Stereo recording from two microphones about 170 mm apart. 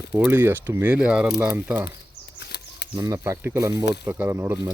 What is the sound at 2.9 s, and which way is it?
Speech, 20° right (ahead or behind).